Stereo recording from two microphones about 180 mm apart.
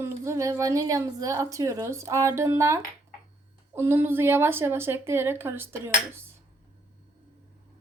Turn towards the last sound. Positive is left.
turn(degrees=-15)  # may be behind; listen again after turning